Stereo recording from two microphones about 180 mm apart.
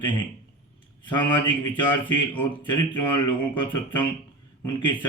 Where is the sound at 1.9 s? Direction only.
10° left (ahead or behind).